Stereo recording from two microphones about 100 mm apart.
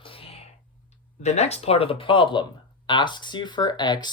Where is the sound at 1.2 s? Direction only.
90° left.